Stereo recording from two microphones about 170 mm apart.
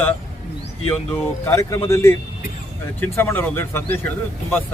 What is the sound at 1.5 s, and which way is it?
A man's voice, 15° left (ahead or behind).